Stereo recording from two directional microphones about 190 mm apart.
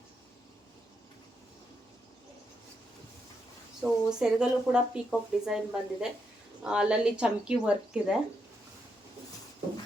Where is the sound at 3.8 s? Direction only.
5° right (ahead or behind).